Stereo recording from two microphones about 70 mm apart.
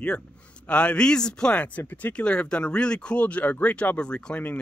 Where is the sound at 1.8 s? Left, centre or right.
Left.